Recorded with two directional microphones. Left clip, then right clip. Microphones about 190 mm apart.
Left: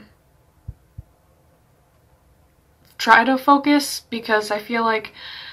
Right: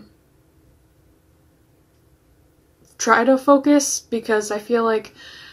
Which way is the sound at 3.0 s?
5° left (ahead or behind).